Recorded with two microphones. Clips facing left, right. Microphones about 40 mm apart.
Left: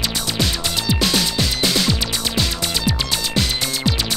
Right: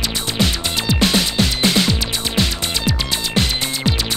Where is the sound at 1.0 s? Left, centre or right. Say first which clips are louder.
Right 4 dB; right.